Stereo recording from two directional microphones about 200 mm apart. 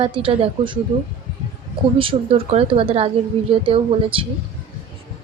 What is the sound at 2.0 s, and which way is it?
Speech, 25° right (ahead or behind).